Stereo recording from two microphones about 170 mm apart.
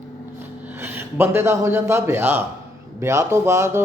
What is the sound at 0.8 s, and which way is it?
Speech, 15° right (ahead or behind).